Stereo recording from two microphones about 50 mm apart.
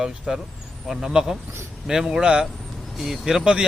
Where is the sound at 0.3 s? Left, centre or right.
Centre.